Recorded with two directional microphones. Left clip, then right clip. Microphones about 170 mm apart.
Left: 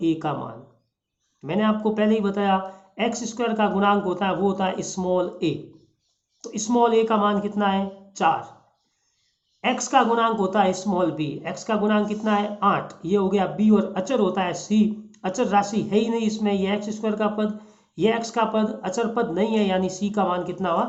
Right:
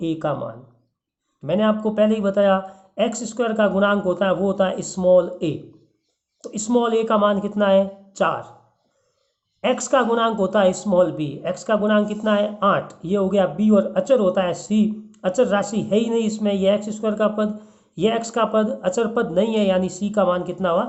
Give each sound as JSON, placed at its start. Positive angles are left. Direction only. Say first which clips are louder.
{"t": 0.0, "sound": "speech", "louder": "right 1 dB", "side_deg": -40}
{"t": 9.6, "sound": "speech", "louder": "right 1 dB", "side_deg": -45}